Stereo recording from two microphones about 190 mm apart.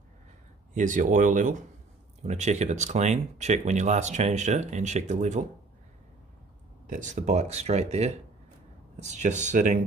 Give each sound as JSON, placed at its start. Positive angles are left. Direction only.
{"t": 0.7, "sound": "speech", "side_deg": -40}
{"t": 6.9, "sound": "speech", "side_deg": -40}